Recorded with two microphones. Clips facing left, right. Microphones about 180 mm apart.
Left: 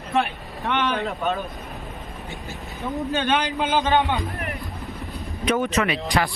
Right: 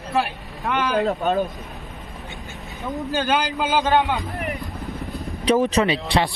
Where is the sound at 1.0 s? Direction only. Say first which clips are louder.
Right 5 dB; 35° right (ahead or behind).